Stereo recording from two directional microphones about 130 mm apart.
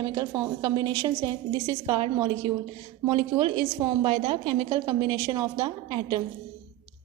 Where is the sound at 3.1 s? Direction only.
40° right (ahead or behind).